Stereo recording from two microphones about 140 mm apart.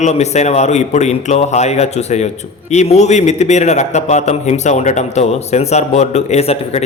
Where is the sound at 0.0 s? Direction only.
55° left (ahead or behind).